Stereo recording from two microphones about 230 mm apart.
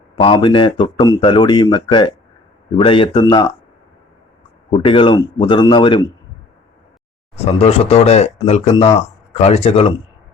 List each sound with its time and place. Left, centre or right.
0.2 s speech: left
4.7 s speech: left
7.3 s speech: left